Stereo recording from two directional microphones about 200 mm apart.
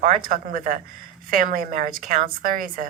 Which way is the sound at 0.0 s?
45° right (ahead or behind).